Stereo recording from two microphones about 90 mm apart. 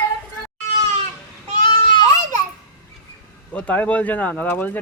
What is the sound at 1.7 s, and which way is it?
Baby cry, 60° left (ahead or behind).